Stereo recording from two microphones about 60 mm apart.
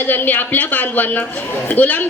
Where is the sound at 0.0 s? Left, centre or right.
Left.